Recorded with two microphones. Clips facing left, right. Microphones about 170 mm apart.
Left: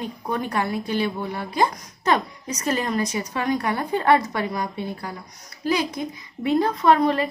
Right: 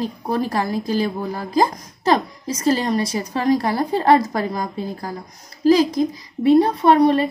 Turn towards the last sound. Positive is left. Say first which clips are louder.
# right 4 dB
turn(degrees=-30)  # may be behind; listen again after turning